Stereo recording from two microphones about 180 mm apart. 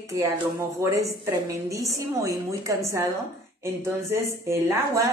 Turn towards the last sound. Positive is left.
turn(degrees=-15)  # may be behind; listen again after turning